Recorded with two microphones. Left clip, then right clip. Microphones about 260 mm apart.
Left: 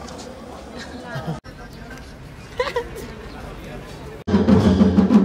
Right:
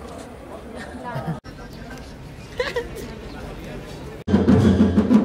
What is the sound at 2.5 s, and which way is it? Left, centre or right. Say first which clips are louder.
Speech: left 2 dB; centre.